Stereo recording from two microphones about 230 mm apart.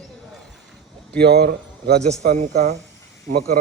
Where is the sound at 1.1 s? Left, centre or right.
Right.